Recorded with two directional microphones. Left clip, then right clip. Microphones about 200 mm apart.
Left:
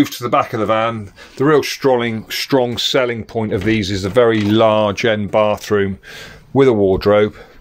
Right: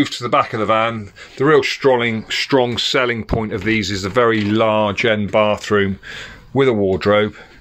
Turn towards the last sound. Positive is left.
turn(degrees=10)  # may be behind; listen again after turning